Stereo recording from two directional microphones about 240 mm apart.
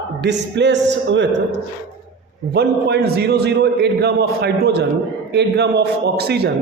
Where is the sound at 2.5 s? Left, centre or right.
Right.